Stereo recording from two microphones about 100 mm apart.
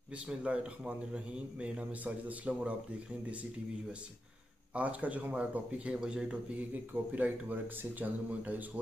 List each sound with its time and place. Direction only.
0.3 s speech: 10° right (ahead or behind)
4.7 s speech: 15° right (ahead or behind)